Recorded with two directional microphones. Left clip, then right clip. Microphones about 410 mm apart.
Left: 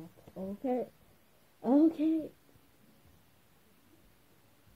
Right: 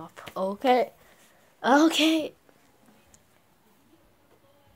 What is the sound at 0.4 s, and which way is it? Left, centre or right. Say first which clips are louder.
Speech: right 13 dB; right.